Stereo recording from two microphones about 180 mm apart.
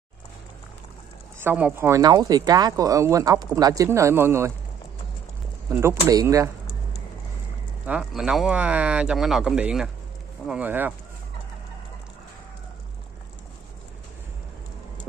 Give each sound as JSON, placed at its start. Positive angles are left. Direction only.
{"t": 1.4, "sound": "speech", "side_deg": -10}
{"t": 5.7, "sound": "speech", "side_deg": -15}
{"t": 7.8, "sound": "speech", "side_deg": -5}